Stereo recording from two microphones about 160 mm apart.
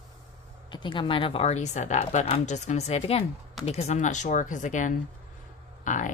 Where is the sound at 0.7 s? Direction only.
30° left (ahead or behind).